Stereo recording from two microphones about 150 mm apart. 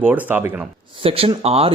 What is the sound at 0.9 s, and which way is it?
Speech, 40° right (ahead or behind).